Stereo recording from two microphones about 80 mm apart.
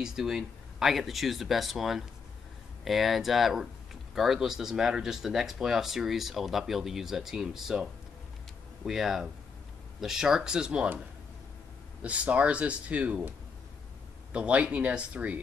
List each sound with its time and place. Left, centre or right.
0.0 s speech: centre
12.0 s speech: centre
14.3 s speech: centre